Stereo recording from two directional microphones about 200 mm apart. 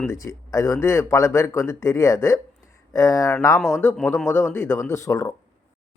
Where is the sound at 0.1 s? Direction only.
15° left (ahead or behind).